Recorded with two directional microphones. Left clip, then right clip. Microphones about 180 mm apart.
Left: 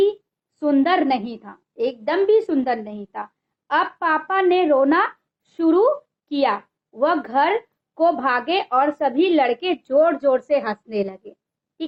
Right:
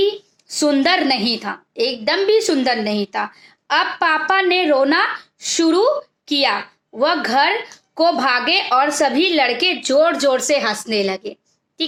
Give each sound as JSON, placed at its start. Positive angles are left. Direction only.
{"t": 0.6, "sound": "a woman's voice", "side_deg": -20}